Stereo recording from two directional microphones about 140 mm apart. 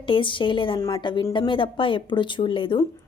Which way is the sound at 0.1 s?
35° left (ahead or behind).